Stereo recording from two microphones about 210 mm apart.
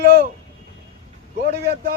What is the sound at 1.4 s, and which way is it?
Speech, 50° right (ahead or behind).